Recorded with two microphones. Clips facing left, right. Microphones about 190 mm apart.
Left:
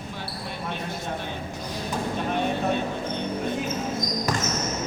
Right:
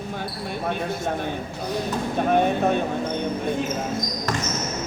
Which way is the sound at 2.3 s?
50° right (ahead or behind).